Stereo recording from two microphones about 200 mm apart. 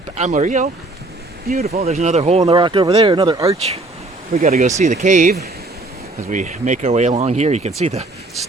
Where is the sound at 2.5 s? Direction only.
25° right (ahead or behind).